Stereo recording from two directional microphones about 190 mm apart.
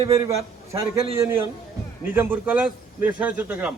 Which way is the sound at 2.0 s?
10° right (ahead or behind).